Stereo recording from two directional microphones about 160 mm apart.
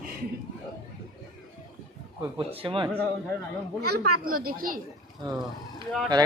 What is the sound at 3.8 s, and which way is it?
Speech, 75° right (ahead or behind).